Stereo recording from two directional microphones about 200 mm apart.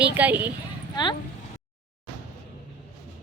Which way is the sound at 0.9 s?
20° left (ahead or behind).